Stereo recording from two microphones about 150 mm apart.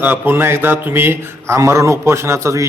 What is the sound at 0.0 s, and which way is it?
A man's voice, 15° right (ahead or behind).